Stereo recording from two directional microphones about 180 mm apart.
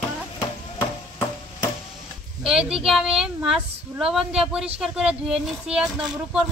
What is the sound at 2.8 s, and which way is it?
Speech, 5° right (ahead or behind).